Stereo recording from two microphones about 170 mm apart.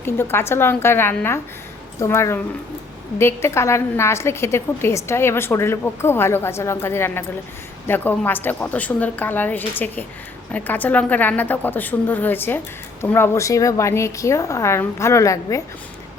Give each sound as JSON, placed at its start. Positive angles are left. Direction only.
{"t": 0.0, "sound": "a woman's voice", "side_deg": 15}